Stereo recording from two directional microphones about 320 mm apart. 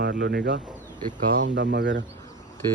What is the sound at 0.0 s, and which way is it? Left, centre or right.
Speech, right.